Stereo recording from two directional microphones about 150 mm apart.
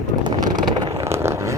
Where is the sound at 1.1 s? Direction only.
20° right (ahead or behind).